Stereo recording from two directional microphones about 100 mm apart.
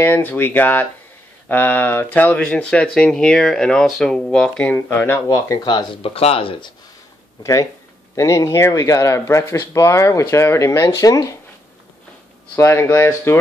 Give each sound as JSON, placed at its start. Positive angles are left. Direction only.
{"t": 0.0, "sound": "speech", "side_deg": 20}
{"t": 6.0, "sound": "speech", "side_deg": 75}
{"t": 8.2, "sound": "speech", "side_deg": 30}
{"t": 12.5, "sound": "speech", "side_deg": 25}